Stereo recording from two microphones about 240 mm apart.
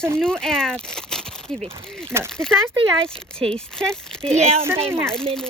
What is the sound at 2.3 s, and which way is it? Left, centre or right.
Speech, centre.